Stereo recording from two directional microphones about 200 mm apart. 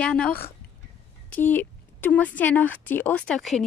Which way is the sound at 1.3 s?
10° left (ahead or behind).